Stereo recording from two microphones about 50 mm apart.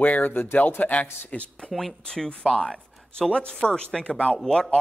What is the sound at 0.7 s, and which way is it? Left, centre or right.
Speech, left.